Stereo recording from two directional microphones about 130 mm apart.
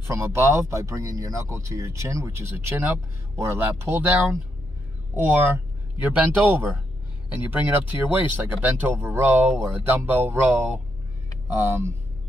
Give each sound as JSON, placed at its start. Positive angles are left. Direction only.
{"t": 0.0, "sound": "speech", "side_deg": -20}